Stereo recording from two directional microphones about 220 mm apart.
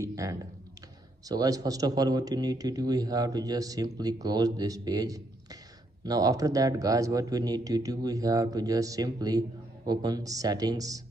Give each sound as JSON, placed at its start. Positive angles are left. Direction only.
{"t": 0.0, "sound": "a man's voice", "side_deg": -15}